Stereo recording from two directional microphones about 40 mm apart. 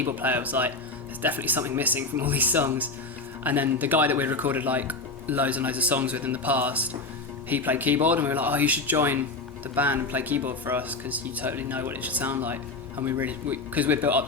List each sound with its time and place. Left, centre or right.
0.0 s speech: right
9.0 s speech: right
9.7 s speech: right
11.5 s speech: right
11.9 s speech: right
13.1 s speech: right